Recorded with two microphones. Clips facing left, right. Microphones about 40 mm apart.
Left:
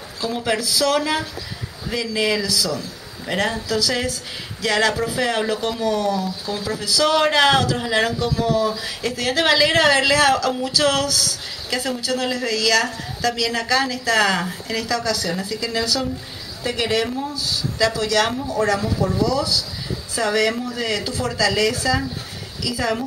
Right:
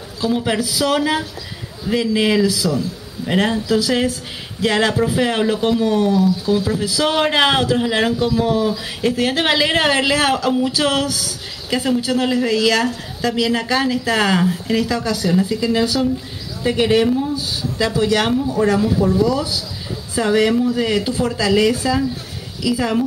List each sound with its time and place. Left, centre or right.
0.2 s speech: centre